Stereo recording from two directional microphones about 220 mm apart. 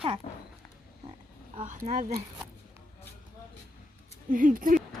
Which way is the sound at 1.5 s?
35° right (ahead or behind).